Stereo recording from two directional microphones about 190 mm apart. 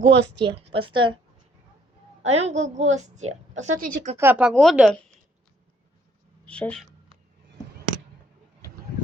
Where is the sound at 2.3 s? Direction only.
35° right (ahead or behind).